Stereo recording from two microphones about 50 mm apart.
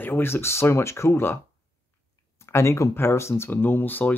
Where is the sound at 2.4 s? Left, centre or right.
Left.